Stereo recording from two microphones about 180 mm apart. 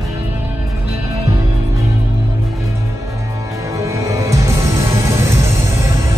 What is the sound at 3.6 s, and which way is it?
Music, 15° right (ahead or behind).